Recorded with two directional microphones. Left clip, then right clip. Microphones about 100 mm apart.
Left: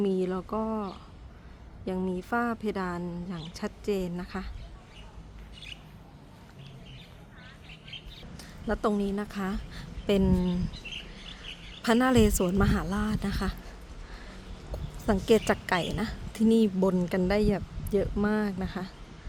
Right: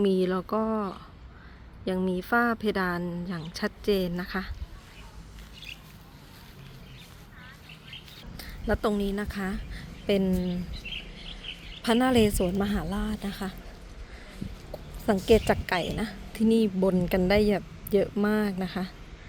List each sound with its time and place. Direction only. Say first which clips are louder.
0.0 s speech: right 4 dB; 25° right (ahead or behind)
8.4 s a woman's voice: right 2 dB; 10° right (ahead or behind)
9.7 s a sound: right 1 dB; 20° left (ahead or behind)
10.3 s speech: left 1 dB; 50° left (ahead or behind)
11.8 s a woman's voice: even; 20° left (ahead or behind)
14.7 s a sound: right 2 dB; 10° left (ahead or behind)
15.3 s a woman's voice: right 2 dB; 15° left (ahead or behind)
17.1 s speech: right 3 dB; 10° right (ahead or behind)